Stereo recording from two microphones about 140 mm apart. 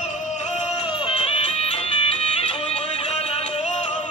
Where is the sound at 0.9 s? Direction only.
40° left (ahead or behind).